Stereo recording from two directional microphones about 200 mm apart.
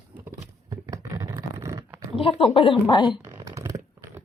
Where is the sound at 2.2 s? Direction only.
30° left (ahead or behind).